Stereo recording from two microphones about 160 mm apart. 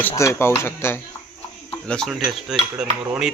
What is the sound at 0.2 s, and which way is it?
Speech, 15° left (ahead or behind).